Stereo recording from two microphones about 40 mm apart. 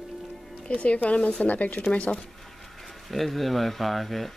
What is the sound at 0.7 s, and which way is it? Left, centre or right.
Speech, left.